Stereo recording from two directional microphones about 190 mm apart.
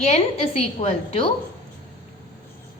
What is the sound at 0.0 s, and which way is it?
A woman's voice, 35° left (ahead or behind).